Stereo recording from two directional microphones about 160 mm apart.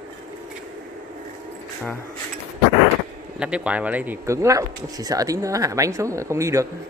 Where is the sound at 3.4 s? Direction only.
5° right (ahead or behind).